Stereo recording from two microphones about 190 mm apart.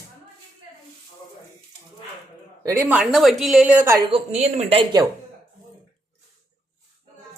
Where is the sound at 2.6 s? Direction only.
15° right (ahead or behind).